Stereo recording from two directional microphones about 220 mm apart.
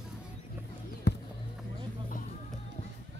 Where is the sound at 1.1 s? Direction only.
50° left (ahead or behind).